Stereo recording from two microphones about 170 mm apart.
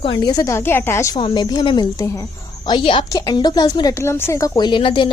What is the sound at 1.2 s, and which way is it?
A woman's voice, 25° left (ahead or behind).